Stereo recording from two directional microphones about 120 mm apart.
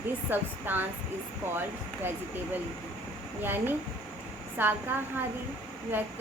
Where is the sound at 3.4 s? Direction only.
15° right (ahead or behind).